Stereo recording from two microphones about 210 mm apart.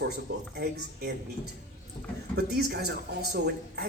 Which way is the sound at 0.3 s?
50° right (ahead or behind).